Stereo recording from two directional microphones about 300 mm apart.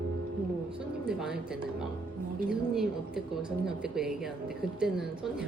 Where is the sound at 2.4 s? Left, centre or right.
Centre.